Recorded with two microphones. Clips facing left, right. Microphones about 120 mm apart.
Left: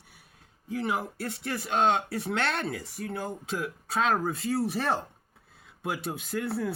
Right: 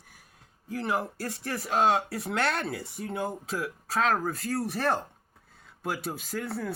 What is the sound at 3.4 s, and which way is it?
Speech, centre (ahead or behind).